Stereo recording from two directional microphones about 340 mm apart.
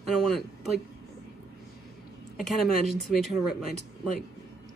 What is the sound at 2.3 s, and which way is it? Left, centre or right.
Speech, centre.